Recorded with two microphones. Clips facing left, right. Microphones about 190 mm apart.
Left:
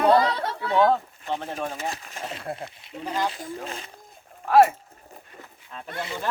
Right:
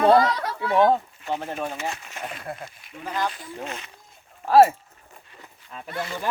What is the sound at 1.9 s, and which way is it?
Speech, 30° left (ahead or behind).